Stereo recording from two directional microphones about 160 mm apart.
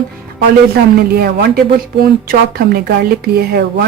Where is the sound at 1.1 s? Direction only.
75° right (ahead or behind).